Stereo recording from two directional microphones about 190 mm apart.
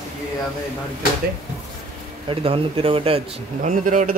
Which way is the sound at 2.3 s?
30° right (ahead or behind).